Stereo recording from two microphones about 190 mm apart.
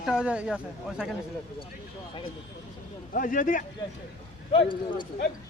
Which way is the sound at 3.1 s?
45° left (ahead or behind).